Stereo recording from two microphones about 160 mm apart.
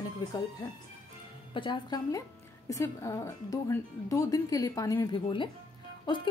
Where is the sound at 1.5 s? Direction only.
30° left (ahead or behind).